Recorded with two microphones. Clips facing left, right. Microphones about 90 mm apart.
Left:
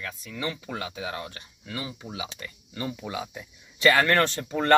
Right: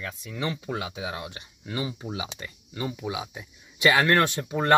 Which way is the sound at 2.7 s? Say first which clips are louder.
Right 1 dB; 15° right (ahead or behind).